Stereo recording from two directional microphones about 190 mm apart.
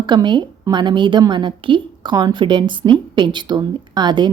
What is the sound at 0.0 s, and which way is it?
A woman's voice, 25° right (ahead or behind).